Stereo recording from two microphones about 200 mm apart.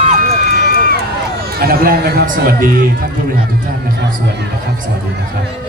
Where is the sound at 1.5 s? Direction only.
50° right (ahead or behind).